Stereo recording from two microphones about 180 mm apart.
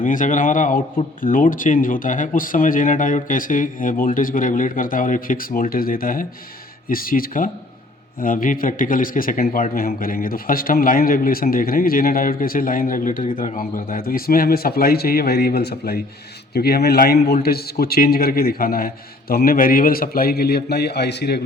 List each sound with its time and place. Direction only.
0.0 s a man's voice: 45° left (ahead or behind); by 21.4 s 65° left (ahead or behind)